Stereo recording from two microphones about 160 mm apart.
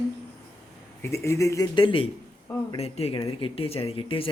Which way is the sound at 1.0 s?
15° left (ahead or behind).